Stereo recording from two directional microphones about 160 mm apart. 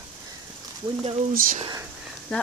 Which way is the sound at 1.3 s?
60° right (ahead or behind).